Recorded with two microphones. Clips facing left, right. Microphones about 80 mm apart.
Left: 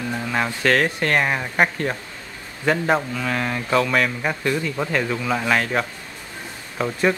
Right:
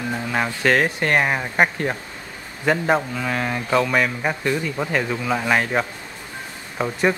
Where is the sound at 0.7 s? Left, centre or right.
Centre.